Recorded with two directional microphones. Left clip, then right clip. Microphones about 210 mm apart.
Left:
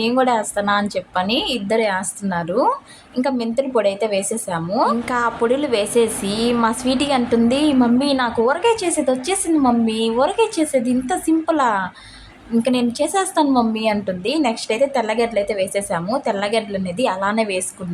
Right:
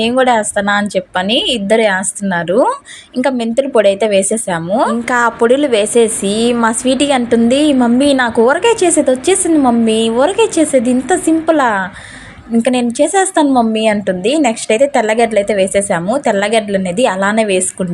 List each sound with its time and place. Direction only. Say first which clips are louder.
0.0 s a woman's voice: right 6 dB; 25° right (ahead or behind)